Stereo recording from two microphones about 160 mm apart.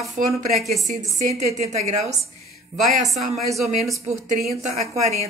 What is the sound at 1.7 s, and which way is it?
Speech, 45° right (ahead or behind).